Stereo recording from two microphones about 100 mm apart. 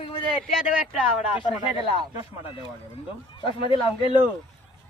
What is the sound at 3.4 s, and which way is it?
Speech, 60° left (ahead or behind).